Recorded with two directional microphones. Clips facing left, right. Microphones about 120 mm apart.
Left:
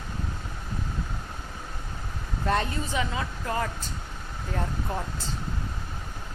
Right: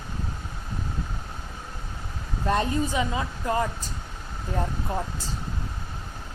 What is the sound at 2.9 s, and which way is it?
Speech, 20° right (ahead or behind).